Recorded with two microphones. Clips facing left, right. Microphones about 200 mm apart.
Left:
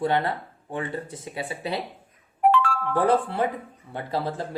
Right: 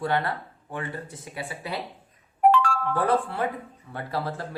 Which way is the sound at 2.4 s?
40° right (ahead or behind).